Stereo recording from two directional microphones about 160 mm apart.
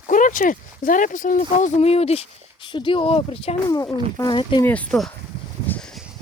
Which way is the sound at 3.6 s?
20° left (ahead or behind).